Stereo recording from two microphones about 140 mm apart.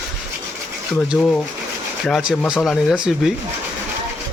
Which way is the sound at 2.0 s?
5° left (ahead or behind).